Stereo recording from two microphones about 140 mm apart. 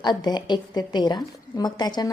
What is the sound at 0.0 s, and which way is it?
A woman's voice, 30° left (ahead or behind).